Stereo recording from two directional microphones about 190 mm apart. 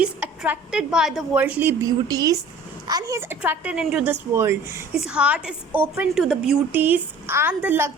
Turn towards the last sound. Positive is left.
turn(degrees=-10)  # may be behind; listen again after turning